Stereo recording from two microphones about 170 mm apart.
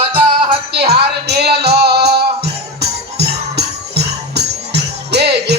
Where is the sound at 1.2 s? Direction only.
75° right (ahead or behind).